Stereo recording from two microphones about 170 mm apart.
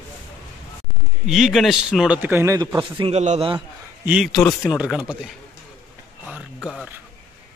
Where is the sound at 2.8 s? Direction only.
35° right (ahead or behind).